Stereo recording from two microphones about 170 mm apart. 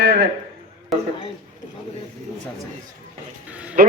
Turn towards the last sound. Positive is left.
turn(degrees=-60)  # may be behind; listen again after turning